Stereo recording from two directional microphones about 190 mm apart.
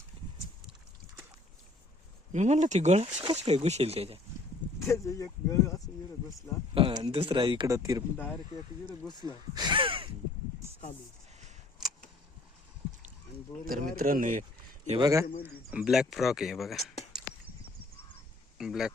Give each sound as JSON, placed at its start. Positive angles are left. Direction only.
{"t": 2.3, "sound": "speech", "side_deg": -40}
{"t": 4.8, "sound": "speech", "side_deg": 15}
{"t": 6.7, "sound": "speech", "side_deg": -25}
{"t": 8.2, "sound": "speech", "side_deg": 10}
{"t": 9.0, "sound": "speech", "side_deg": 25}
{"t": 9.6, "sound": "gasp", "side_deg": -25}
{"t": 13.7, "sound": "speech", "side_deg": -45}
{"t": 14.9, "sound": "speech", "side_deg": -15}
{"t": 15.4, "sound": "speech", "side_deg": -5}
{"t": 18.5, "sound": "speech", "side_deg": 0}